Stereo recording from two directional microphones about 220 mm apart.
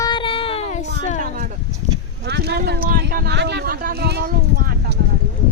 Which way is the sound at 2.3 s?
50° right (ahead or behind).